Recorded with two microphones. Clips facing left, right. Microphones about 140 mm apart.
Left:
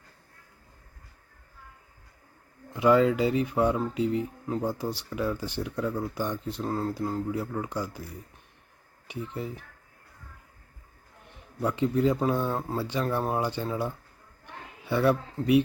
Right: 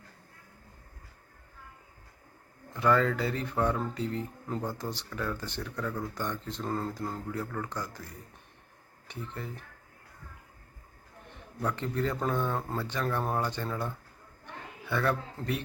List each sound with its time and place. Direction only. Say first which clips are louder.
2.7 s speech: left 5 dB; 15° left (ahead or behind)
11.6 s speech: left 7 dB; 15° left (ahead or behind)
14.4 s a sound: left 2 dB; 15° left (ahead or behind)